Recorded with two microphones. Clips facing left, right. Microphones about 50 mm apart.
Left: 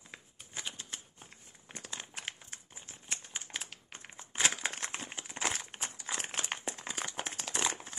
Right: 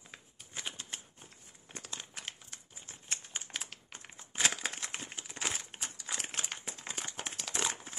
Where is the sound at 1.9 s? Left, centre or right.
Centre.